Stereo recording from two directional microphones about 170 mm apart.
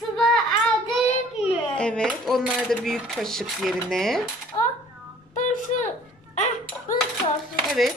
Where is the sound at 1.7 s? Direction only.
5° left (ahead or behind).